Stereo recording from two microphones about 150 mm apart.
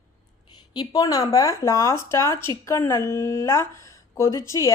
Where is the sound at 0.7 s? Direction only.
25° left (ahead or behind).